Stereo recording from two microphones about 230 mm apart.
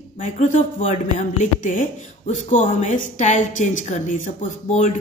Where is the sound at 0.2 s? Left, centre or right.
Left.